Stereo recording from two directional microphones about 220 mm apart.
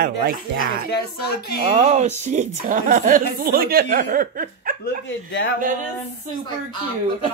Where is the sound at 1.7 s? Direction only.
30° right (ahead or behind).